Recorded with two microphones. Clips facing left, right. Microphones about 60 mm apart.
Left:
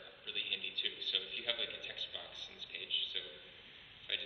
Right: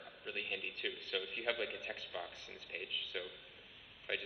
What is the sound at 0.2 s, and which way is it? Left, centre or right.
A man's voice, right.